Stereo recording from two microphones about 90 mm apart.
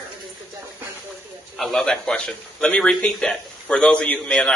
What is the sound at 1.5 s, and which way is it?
A man's voice, 5° left (ahead or behind).